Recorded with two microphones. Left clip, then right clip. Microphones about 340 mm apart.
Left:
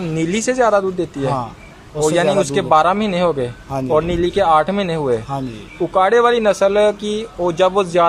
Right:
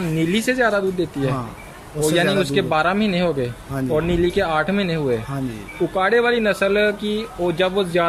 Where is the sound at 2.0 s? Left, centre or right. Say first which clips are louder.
Left 4 dB; centre.